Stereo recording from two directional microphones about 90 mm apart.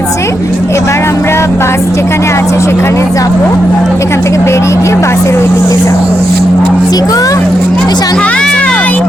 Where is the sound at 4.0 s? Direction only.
35° left (ahead or behind).